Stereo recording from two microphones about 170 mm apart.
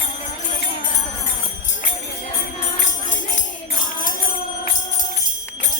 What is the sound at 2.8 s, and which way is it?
Music, 45° left (ahead or behind).